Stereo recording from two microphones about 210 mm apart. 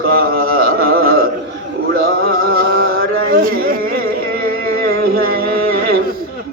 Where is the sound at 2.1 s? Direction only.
45° right (ahead or behind).